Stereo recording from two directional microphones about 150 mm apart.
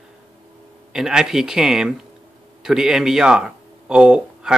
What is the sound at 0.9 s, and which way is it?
Speech, 5° right (ahead or behind).